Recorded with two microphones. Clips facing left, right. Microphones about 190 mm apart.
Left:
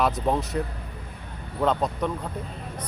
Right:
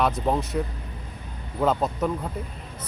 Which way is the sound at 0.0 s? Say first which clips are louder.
Even; centre (ahead or behind).